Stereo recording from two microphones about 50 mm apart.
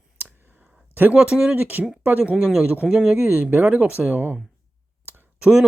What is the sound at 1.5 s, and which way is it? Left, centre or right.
Speech, right.